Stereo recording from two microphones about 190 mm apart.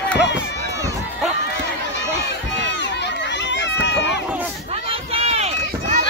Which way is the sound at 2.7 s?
65° left (ahead or behind).